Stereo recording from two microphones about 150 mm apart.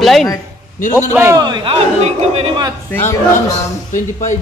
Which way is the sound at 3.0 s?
55° left (ahead or behind).